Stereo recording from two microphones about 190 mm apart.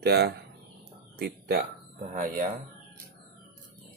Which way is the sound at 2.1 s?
45° right (ahead or behind).